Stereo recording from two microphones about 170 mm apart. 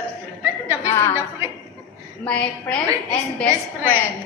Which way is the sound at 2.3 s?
5° left (ahead or behind).